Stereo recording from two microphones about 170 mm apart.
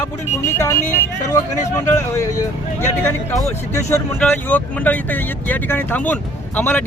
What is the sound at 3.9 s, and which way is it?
Speech, 10° left (ahead or behind).